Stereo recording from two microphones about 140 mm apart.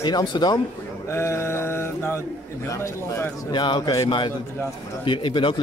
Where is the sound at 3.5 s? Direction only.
35° left (ahead or behind).